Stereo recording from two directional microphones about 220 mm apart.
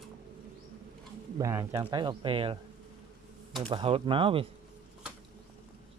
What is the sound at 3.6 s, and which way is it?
Speech, 25° right (ahead or behind).